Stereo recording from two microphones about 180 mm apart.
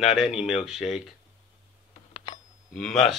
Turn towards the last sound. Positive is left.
turn(degrees=0)  # may be behind; listen again after turning